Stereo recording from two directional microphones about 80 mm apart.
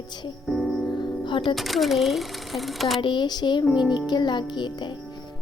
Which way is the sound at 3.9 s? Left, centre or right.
Left.